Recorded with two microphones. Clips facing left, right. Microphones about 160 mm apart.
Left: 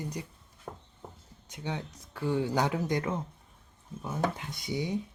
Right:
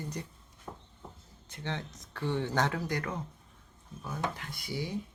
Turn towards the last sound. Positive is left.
turn(degrees=20)  # may be behind; listen again after turning